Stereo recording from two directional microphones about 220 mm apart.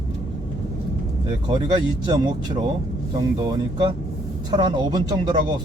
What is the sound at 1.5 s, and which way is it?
Speech, 20° right (ahead or behind).